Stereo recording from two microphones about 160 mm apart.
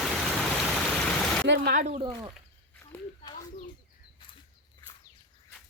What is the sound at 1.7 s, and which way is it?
Speech, 45° right (ahead or behind).